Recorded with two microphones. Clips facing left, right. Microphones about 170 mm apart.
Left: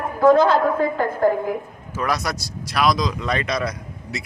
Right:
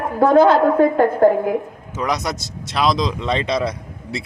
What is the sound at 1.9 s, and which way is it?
Speech, 20° right (ahead or behind).